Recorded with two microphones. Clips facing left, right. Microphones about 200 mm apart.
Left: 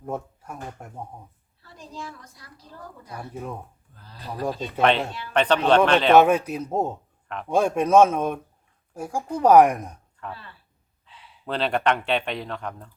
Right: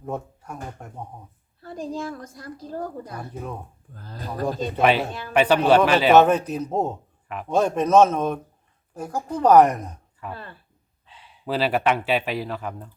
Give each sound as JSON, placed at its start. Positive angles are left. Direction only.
{"t": 0.1, "sound": "speech", "side_deg": 5}
{"t": 1.6, "sound": "a woman's voice", "side_deg": -50}
{"t": 3.1, "sound": "speech", "side_deg": 5}
{"t": 3.9, "sound": "a woman's voice", "side_deg": -45}
{"t": 4.8, "sound": "speech", "side_deg": -5}
{"t": 6.1, "sound": "speech", "side_deg": 10}
{"t": 10.3, "sound": "a woman's voice", "side_deg": -50}
{"t": 11.4, "sound": "speech", "side_deg": -5}